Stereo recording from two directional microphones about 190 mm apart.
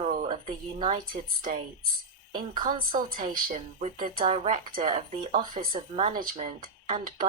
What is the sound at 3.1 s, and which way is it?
A woman's voice, 45° right (ahead or behind).